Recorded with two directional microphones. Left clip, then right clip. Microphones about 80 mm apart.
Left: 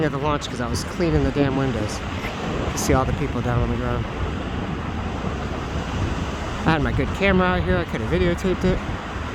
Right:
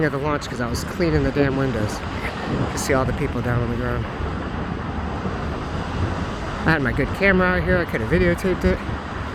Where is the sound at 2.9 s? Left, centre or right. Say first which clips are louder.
Right 1 dB; centre.